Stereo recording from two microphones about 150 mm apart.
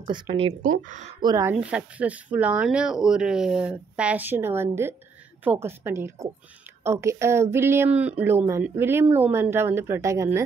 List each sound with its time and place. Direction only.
0.0 s speech: 35° right (ahead or behind)
0.6 s speech: 60° right (ahead or behind)
1.2 s speech: 20° right (ahead or behind)